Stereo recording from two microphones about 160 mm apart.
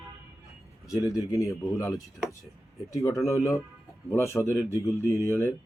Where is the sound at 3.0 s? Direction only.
20° left (ahead or behind).